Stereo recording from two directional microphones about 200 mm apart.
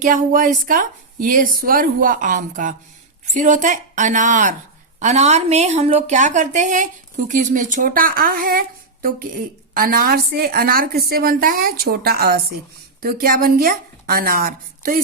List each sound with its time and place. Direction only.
0.0 s a woman's voice: 45° right (ahead or behind)